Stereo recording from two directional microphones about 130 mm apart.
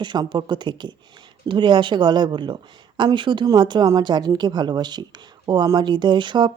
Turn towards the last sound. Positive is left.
turn(degrees=-35)  # may be behind; listen again after turning